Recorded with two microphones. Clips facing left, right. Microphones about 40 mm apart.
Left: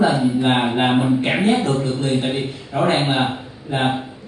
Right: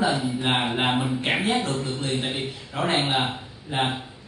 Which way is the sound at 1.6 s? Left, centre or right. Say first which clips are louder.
Left 7 dB; left.